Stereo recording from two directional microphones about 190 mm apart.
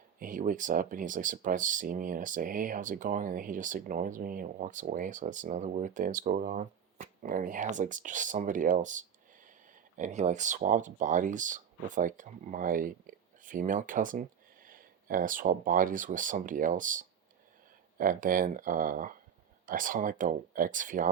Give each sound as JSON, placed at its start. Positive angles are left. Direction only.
{"t": 0.2, "sound": "speech", "side_deg": -45}